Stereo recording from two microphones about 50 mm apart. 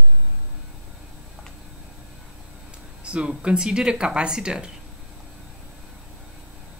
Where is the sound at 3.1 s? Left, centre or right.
Right.